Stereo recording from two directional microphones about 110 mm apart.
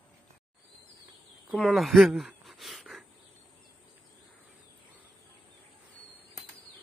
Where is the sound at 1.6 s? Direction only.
Centre (ahead or behind).